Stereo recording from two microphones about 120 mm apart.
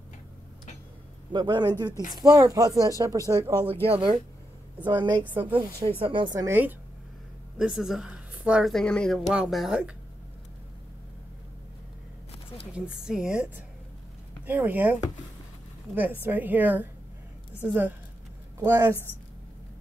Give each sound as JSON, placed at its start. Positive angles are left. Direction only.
{"t": 1.3, "sound": "speech", "side_deg": -40}
{"t": 3.8, "sound": "speech", "side_deg": -50}
{"t": 4.8, "sound": "speech", "side_deg": -40}
{"t": 5.3, "sound": "a woman's voice", "side_deg": -15}
{"t": 6.0, "sound": "speech", "side_deg": -45}
{"t": 6.4, "sound": "a woman's voice", "side_deg": -15}
{"t": 7.5, "sound": "a woman's voice", "side_deg": -5}
{"t": 8.7, "sound": "speech", "side_deg": 5}
{"t": 9.3, "sound": "a woman's voice", "side_deg": -5}
{"t": 12.7, "sound": "a woman's voice", "side_deg": -5}
{"t": 16.2, "sound": "a woman's voice", "side_deg": -15}